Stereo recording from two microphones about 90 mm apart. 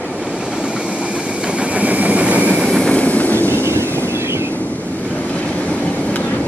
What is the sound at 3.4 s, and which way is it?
Vehicle, 25° right (ahead or behind).